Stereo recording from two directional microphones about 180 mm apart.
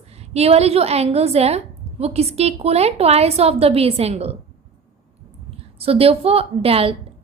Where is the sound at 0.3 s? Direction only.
35° right (ahead or behind).